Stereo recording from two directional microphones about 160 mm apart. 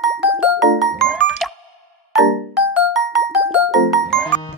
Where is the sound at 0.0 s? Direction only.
Centre (ahead or behind).